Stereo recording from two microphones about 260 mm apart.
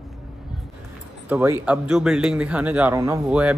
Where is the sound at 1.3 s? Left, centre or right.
Centre.